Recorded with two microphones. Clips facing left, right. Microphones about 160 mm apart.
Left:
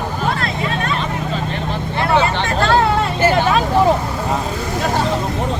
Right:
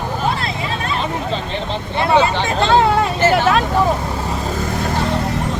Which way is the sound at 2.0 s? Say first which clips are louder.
Right 2 dB; 20° right (ahead or behind).